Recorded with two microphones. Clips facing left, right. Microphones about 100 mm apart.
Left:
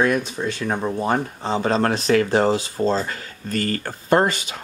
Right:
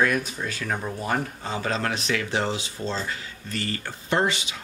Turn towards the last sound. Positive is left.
turn(degrees=45)  # may be behind; listen again after turning